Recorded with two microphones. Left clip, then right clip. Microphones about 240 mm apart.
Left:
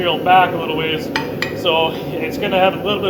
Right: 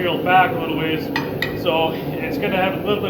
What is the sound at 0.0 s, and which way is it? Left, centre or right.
A man's voice, left.